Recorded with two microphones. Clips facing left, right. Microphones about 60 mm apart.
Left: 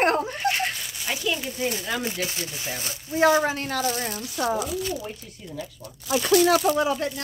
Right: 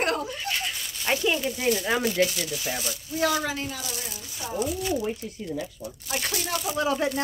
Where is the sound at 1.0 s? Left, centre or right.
Right.